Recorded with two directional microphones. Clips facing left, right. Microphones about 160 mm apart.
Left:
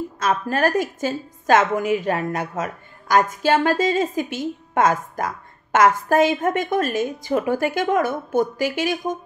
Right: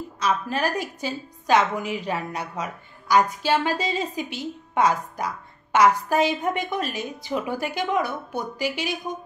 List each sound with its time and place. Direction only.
0.2 s a woman's voice: 50° left (ahead or behind)